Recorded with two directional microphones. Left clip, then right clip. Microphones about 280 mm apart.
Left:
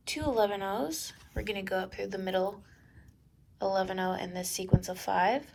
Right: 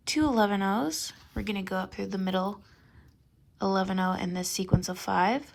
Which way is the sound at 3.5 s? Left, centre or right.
Right.